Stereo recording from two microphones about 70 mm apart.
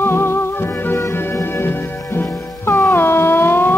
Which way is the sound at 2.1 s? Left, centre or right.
Left.